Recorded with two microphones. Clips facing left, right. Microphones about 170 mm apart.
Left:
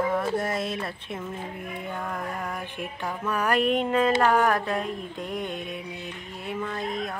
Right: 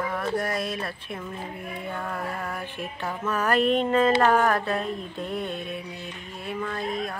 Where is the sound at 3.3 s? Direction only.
10° left (ahead or behind).